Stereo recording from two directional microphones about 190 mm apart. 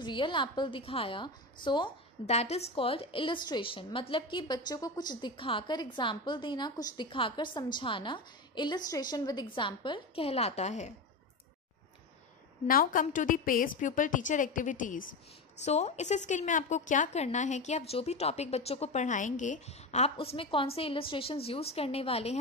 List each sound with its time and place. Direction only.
0.0 s a woman's voice: 25° left (ahead or behind)
12.6 s a woman's voice: 45° left (ahead or behind)